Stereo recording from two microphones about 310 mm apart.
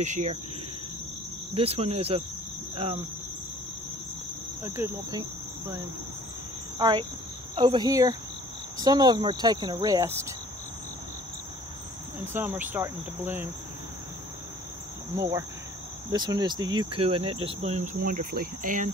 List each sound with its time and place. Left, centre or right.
0.0 s speech: right
1.5 s speech: centre
2.7 s cricket: centre
4.6 s speech: centre
6.8 s speech: centre
12.3 s speech: centre
15.1 s speech: centre; by 18.9 s right